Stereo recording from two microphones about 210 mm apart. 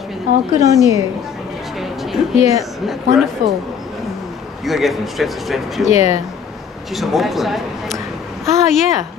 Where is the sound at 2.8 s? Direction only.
Centre (ahead or behind).